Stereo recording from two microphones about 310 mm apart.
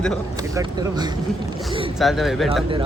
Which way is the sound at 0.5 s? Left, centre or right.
Centre.